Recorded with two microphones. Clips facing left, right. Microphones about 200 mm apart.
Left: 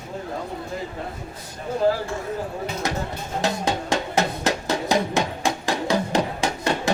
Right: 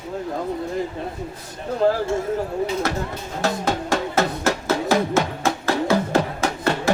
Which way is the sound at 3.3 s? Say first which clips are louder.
Right 1 dB; 15° left (ahead or behind).